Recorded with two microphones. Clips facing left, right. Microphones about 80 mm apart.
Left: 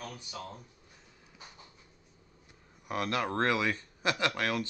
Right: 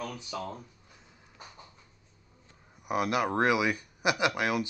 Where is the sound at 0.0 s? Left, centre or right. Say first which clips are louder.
Right 6 dB; right.